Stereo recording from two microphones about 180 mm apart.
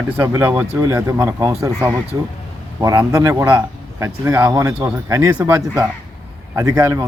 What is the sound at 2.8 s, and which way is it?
Speech, 15° right (ahead or behind).